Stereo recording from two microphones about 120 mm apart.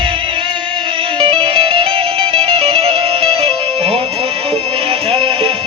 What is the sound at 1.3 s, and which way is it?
Music, 50° right (ahead or behind).